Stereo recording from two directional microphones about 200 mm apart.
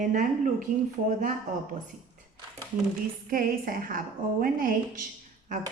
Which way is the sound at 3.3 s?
45° right (ahead or behind).